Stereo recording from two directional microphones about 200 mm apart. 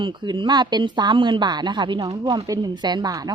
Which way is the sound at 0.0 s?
25° right (ahead or behind).